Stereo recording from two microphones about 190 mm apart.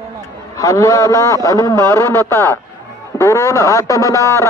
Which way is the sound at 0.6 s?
15° left (ahead or behind).